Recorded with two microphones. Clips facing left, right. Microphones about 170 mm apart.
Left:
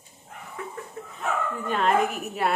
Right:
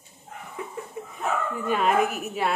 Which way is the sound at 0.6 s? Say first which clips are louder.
Right 2 dB; 15° right (ahead or behind).